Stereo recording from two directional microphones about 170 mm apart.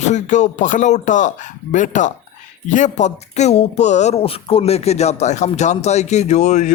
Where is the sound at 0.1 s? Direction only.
45° left (ahead or behind).